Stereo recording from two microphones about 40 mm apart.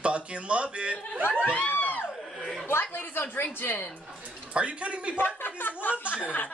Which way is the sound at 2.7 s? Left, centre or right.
Left.